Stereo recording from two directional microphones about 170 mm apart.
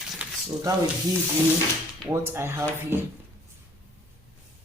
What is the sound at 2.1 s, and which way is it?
Speech, 15° right (ahead or behind).